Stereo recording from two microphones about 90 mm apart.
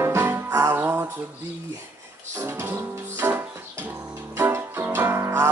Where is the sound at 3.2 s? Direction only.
25° right (ahead or behind).